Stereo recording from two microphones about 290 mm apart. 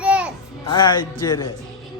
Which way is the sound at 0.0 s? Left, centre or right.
Centre.